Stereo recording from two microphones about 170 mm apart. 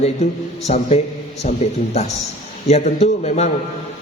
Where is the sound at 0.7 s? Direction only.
40° left (ahead or behind).